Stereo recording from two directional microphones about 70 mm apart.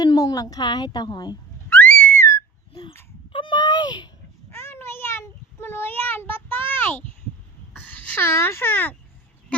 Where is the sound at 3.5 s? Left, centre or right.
Left.